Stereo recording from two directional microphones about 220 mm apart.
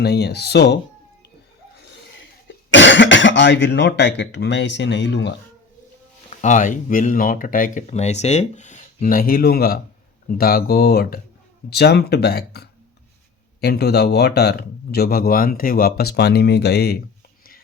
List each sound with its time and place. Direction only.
0.0 s speech: 50° left (ahead or behind)
2.6 s speech: 55° left (ahead or behind)
6.3 s speech: 35° left (ahead or behind)